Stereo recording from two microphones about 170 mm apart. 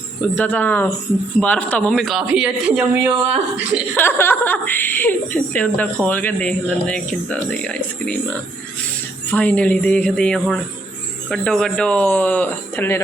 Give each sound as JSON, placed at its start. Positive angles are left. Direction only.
{"t": 0.3, "sound": "a woman's voice", "side_deg": 10}
{"t": 3.9, "sound": "a woman's voice", "side_deg": 10}